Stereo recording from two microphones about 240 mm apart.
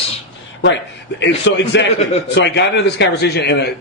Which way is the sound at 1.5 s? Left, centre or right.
Left.